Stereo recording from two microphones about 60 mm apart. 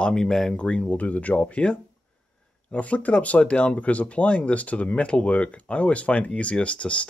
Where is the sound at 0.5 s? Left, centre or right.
Centre.